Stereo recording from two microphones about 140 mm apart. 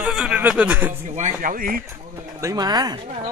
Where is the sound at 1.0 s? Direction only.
60° right (ahead or behind); by 1.8 s 85° right.